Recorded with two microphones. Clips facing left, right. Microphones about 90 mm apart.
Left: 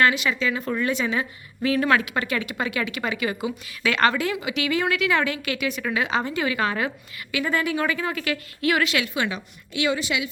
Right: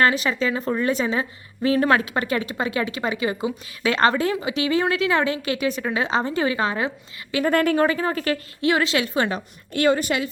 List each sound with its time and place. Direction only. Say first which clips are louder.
0.0 s a woman's voice: right 1 dB; 35° right (ahead or behind)
7.4 s speech: right 6 dB; 50° right (ahead or behind)
7.9 s a woman's voice: right 3 dB; 35° right (ahead or behind)